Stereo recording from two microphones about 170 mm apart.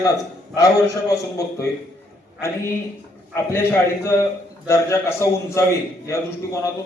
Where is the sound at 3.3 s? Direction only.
15° left (ahead or behind).